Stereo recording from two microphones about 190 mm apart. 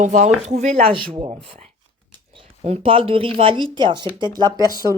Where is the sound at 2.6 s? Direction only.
30° right (ahead or behind).